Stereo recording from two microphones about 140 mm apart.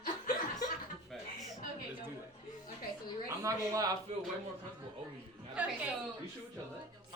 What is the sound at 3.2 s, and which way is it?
Speech, 25° right (ahead or behind).